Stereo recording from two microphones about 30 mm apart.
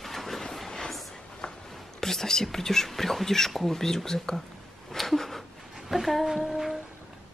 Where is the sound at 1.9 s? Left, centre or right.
Centre.